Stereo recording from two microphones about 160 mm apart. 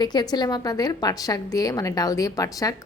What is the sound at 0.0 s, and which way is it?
A woman's voice, 25° left (ahead or behind).